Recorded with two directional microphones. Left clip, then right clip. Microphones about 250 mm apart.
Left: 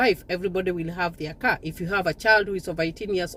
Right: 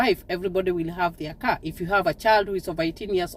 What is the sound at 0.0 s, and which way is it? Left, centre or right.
Speech, centre.